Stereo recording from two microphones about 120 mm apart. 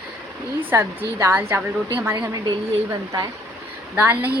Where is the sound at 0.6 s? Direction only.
20° right (ahead or behind).